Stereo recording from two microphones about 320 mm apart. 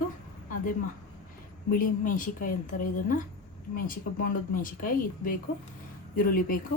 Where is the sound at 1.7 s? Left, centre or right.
Left.